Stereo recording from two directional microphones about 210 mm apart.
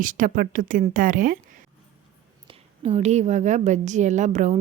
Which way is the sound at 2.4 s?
30° right (ahead or behind).